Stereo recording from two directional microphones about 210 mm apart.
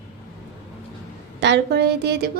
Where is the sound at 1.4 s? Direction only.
55° right (ahead or behind).